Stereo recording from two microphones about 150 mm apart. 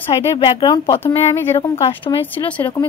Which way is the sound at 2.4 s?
10° left (ahead or behind).